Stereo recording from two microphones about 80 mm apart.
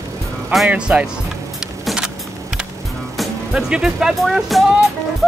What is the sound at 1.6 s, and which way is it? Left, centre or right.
Keys jangling, centre.